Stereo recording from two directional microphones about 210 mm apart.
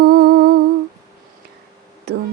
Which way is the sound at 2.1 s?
50° right (ahead or behind).